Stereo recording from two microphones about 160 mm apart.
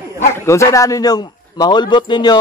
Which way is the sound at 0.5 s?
20° left (ahead or behind).